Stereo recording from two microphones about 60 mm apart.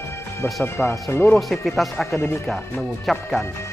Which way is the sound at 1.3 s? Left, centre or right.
Centre.